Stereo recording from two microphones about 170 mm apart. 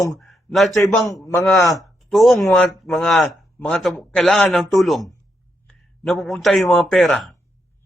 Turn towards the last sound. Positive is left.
turn(degrees=0)  # may be behind; listen again after turning